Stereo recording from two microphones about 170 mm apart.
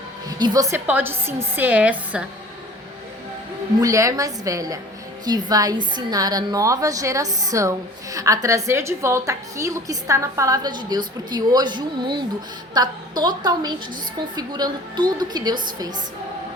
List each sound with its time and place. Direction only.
0.3 s a woman's voice: 25° right (ahead or behind); by 2.2 s 10° right (ahead or behind)
3.8 s a woman's voice: 20° right (ahead or behind)